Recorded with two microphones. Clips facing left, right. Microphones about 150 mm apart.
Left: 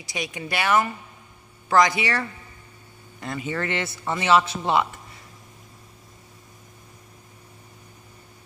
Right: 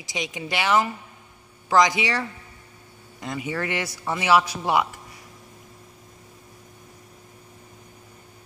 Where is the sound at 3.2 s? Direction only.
15° right (ahead or behind).